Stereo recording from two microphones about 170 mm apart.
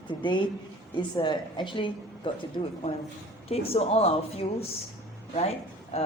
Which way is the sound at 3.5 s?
35° left (ahead or behind).